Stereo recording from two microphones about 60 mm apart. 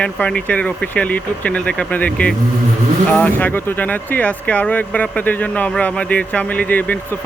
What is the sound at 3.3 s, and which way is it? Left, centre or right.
Speech, left.